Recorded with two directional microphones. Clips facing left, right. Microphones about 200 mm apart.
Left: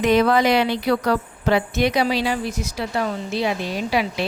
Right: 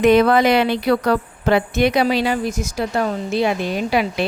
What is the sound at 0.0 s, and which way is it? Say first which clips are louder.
Speech: right 4 dB; 55° right (ahead or behind).